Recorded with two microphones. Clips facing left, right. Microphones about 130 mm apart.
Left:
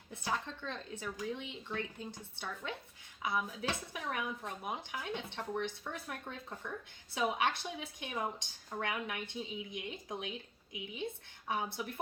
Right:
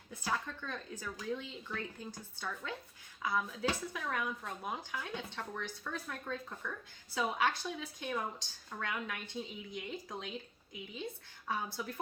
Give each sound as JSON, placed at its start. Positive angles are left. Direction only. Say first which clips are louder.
{"t": 0.1, "sound": "speech", "louder": "even", "side_deg": 25}
{"t": 11.4, "sound": "speech", "louder": "left 1 dB", "side_deg": 20}